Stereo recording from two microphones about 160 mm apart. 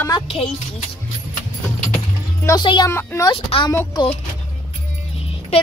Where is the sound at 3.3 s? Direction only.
35° left (ahead or behind).